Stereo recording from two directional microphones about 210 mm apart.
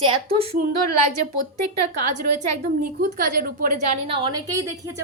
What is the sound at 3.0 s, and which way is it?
Speech, 40° right (ahead or behind).